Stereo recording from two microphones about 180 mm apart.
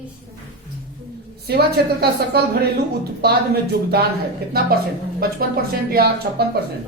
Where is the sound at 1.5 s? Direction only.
60° right (ahead or behind).